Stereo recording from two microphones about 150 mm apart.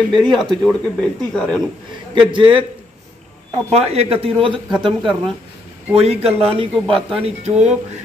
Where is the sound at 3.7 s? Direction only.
45° right (ahead or behind).